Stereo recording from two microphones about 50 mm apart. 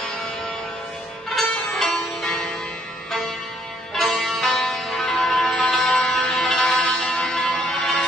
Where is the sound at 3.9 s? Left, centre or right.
Centre.